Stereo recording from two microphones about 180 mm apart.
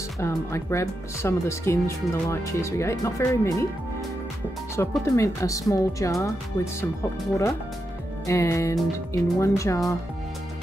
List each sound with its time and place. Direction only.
0.2 s speech: 15° left (ahead or behind)
4.7 s speech: 15° left (ahead or behind)